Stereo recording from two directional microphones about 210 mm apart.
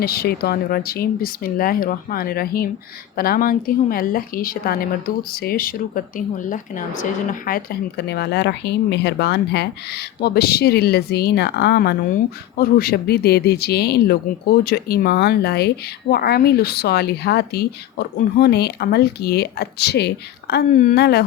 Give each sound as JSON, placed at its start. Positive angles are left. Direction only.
{"t": 0.0, "sound": "a woman's voice", "side_deg": 45}